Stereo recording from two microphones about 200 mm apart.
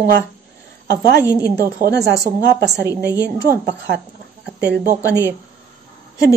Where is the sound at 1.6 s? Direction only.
50° right (ahead or behind).